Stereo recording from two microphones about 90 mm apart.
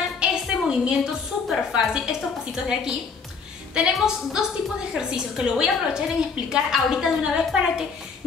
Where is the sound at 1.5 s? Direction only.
5° right (ahead or behind).